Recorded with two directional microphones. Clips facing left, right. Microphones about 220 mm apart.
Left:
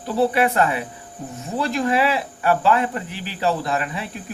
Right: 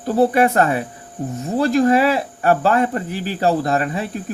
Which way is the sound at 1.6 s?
40° right (ahead or behind).